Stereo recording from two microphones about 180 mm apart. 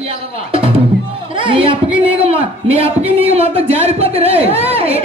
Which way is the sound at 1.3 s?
30° right (ahead or behind).